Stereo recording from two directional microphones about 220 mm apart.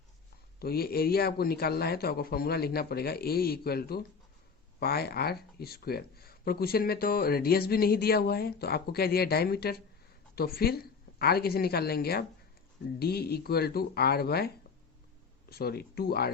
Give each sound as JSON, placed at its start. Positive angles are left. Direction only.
{"t": 0.6, "sound": "a woman's voice", "side_deg": 45}